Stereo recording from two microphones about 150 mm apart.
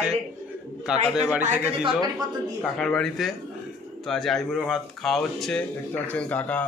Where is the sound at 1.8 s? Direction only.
25° right (ahead or behind).